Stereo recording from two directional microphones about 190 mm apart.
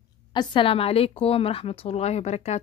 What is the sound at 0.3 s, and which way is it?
A woman's voice, 25° left (ahead or behind).